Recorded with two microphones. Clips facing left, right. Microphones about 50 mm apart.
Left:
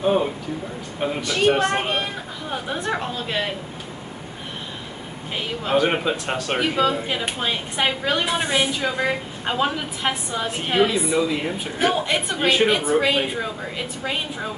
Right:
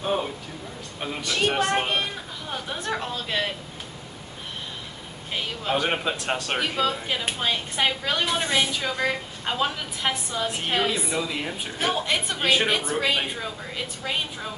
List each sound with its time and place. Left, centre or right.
1.2 s a woman's voice: centre
5.3 s a woman's voice: centre